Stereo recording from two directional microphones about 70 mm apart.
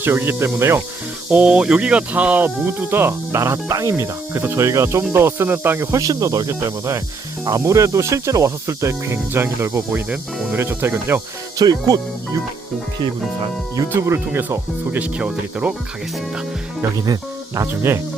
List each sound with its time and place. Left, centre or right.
0.0 s speech: right
1.5 s speech: centre
2.6 s speech: right
5.9 s speech: right
6.5 s speech: right
10.5 s speech: right
11.5 s speech: right
14.0 s speech: right
14.9 s speech: centre
17.7 s speech: right